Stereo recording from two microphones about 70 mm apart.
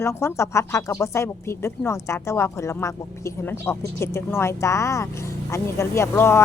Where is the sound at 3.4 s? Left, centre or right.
Left.